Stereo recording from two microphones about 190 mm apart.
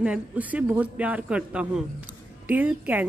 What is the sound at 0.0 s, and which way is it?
A man's voice, 5° right (ahead or behind).